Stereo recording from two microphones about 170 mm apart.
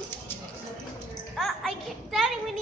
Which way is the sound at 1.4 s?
Centre (ahead or behind).